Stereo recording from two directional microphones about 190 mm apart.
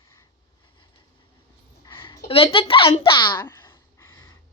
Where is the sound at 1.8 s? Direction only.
25° left (ahead or behind).